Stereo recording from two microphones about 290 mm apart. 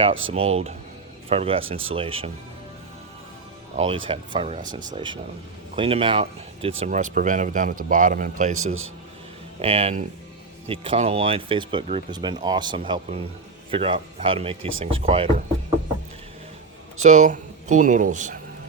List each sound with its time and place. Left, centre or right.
0.1 s speech: right
0.3 s speech: right
3.8 s speech: centre
8.5 s speech: right
9.6 s speech: centre
17.0 s speech: right